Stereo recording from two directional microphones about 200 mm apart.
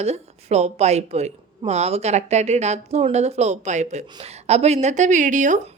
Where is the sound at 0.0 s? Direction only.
30° right (ahead or behind).